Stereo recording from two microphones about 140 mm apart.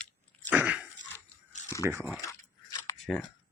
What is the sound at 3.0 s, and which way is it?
Speech, centre (ahead or behind).